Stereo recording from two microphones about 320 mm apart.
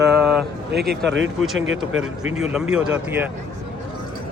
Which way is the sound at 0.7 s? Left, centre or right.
Right.